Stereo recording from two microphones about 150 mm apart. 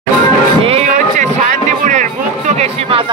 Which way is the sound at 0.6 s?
40° right (ahead or behind).